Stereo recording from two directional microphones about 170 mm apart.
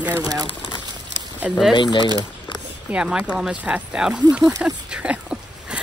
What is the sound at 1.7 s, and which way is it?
Speech, 30° left (ahead or behind).